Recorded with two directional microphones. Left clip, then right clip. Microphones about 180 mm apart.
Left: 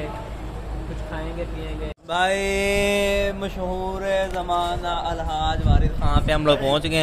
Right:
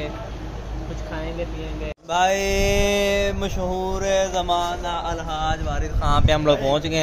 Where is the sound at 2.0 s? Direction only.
Centre (ahead or behind).